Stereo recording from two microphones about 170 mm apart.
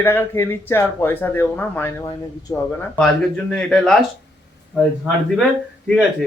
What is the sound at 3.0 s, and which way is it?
Speech, 5° left (ahead or behind).